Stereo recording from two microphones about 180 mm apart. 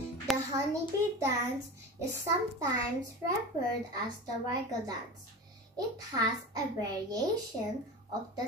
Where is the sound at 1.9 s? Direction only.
15° right (ahead or behind).